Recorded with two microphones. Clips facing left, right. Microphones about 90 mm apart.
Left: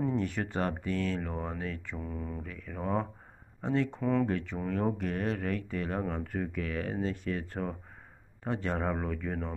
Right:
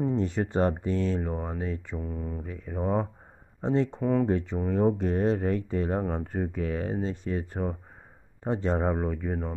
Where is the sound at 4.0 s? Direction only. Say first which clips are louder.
Right 4 dB; 15° right (ahead or behind).